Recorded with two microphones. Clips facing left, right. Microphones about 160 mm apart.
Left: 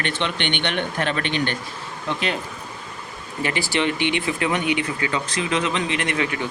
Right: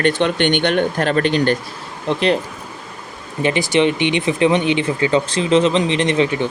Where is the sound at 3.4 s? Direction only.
20° right (ahead or behind).